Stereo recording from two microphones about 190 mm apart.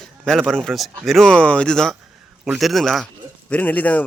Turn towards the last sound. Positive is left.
turn(degrees=10)  # may be behind; listen again after turning